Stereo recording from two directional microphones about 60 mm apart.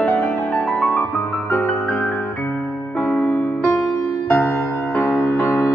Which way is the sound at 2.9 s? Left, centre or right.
Left.